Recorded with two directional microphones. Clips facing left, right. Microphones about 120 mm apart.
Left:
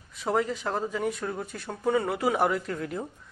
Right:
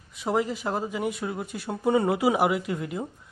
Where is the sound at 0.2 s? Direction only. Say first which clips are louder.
Right 1 dB; 10° right (ahead or behind).